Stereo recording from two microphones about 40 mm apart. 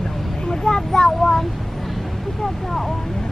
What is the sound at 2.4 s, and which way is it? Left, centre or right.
Vehicle, centre.